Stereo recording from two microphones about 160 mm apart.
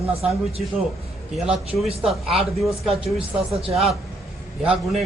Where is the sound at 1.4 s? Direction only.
5° right (ahead or behind).